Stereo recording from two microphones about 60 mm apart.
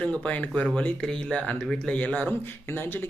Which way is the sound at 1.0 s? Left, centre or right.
Centre.